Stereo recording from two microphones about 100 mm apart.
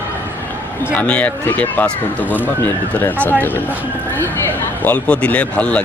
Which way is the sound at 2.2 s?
15° right (ahead or behind).